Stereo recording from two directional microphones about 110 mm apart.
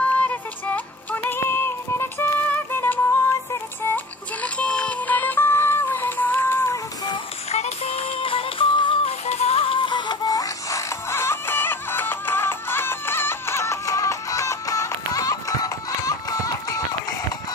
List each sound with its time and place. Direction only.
0.1 s music: 15° left (ahead or behind)
7.5 s music: 70° left (ahead or behind); by 9.1 s 50° left (ahead or behind)
9.2 s music: 85° left; by 16.8 s 30° left (ahead or behind)